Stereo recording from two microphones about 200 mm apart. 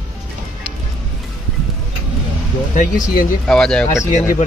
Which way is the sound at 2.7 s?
40° left (ahead or behind).